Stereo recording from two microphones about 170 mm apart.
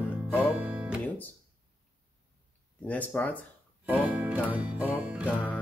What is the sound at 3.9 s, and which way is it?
Music, 10° right (ahead or behind).